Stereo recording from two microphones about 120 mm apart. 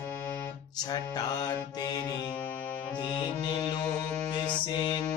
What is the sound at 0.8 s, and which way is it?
Music, 35° left (ahead or behind).